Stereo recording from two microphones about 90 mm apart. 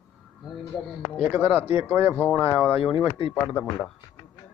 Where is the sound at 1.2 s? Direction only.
15° right (ahead or behind).